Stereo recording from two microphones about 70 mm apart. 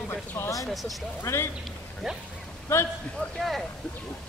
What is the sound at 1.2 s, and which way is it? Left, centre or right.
Speech, left.